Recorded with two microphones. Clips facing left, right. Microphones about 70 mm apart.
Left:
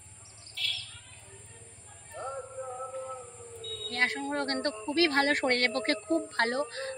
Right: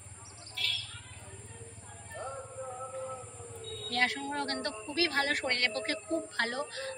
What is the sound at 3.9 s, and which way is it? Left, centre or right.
A woman's voice, left.